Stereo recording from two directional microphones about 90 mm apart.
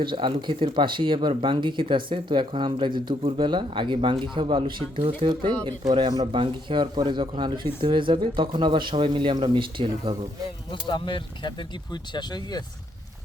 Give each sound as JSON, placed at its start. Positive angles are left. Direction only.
{"t": 0.0, "sound": "speech", "side_deg": -65}
{"t": 10.7, "sound": "speech", "side_deg": 60}
{"t": 12.1, "sound": "speech", "side_deg": 50}